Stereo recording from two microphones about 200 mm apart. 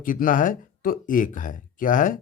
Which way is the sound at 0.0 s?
45° left (ahead or behind).